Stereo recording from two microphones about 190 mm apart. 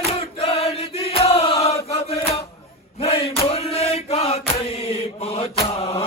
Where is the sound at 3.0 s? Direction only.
30° left (ahead or behind).